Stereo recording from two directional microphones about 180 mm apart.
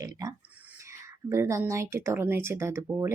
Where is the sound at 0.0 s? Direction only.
20° right (ahead or behind).